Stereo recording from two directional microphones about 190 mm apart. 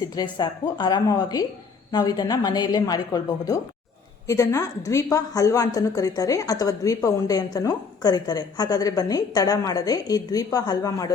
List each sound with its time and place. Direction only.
0.1 s a woman's voice: 20° left (ahead or behind)